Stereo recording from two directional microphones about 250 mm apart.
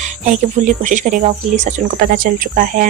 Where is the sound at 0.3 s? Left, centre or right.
Right.